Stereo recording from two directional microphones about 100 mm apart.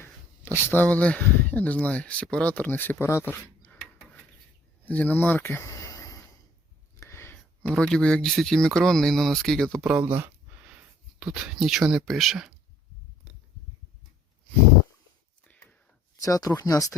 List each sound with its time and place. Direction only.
0.0 s speech: 20° left (ahead or behind)
3.7 s filing: 15° left (ahead or behind)
4.9 s speech: 15° left (ahead or behind); by 6.1 s 35° left (ahead or behind)
7.0 s a sound: 25° left (ahead or behind)
7.8 s speech: 10° left (ahead or behind)
9.8 s a sound: 10° right (ahead or behind)
11.2 s speech: 10° right (ahead or behind)
15.4 s a sound: 15° left (ahead or behind)
16.2 s speech: 35° left (ahead or behind)